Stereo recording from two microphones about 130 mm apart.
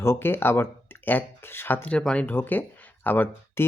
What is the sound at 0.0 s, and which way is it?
Speech, 20° left (ahead or behind).